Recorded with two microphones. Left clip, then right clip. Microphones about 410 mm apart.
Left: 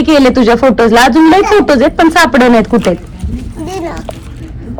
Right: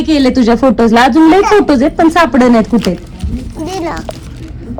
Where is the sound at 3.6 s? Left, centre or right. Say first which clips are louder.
Right 1 dB; centre.